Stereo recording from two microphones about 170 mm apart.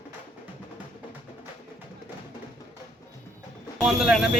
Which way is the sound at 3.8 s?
5° right (ahead or behind).